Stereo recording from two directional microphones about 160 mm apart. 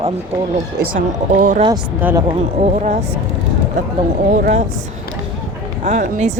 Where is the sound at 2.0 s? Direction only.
15° right (ahead or behind).